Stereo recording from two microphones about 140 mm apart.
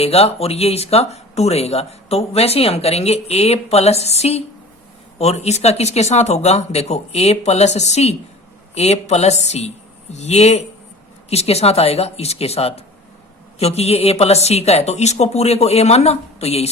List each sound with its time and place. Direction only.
0.0 s a woman's voice: 45° left (ahead or behind)